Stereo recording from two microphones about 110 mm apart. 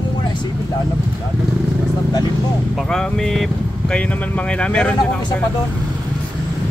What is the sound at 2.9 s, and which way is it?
Speech, 5° left (ahead or behind).